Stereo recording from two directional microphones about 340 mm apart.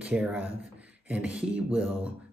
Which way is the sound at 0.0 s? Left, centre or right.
Centre.